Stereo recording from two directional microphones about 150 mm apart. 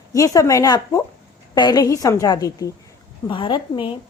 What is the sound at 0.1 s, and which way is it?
Speech, 25° left (ahead or behind).